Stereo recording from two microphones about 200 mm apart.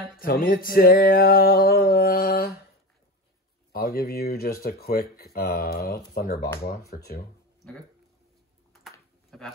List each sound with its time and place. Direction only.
0.2 s music: 45° left (ahead or behind)
3.7 s music: 50° left (ahead or behind)
9.3 s speech: centre (ahead or behind)